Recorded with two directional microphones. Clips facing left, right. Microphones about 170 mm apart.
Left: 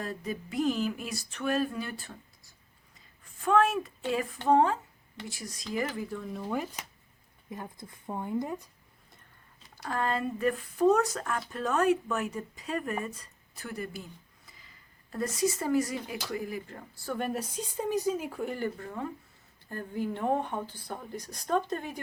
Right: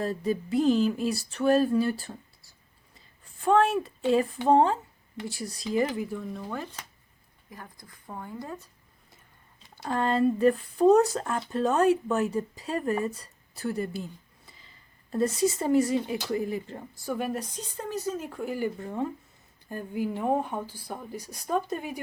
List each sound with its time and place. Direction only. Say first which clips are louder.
0.0 s a sound: right 7 dB; 30° right (ahead or behind)
3.4 s a sound: right 3 dB; 30° right (ahead or behind)
5.9 s speech: right 4 dB; 15° right (ahead or behind)
6.1 s speech: right 1 dB; centre (ahead or behind)
6.5 s speech: left 3 dB; 10° left (ahead or behind)
7.5 s speech: left 5 dB; 25° left (ahead or behind)
9.7 s speech: right 5 dB; 25° right (ahead or behind)
17.1 s speech: right 2 dB; 5° right (ahead or behind)
18.8 s speech: right 5 dB; 20° right (ahead or behind)